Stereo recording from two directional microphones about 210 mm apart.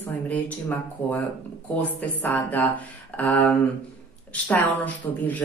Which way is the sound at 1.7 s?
10° left (ahead or behind).